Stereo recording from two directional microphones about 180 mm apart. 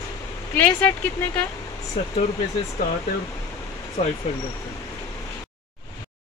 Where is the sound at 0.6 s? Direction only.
10° left (ahead or behind).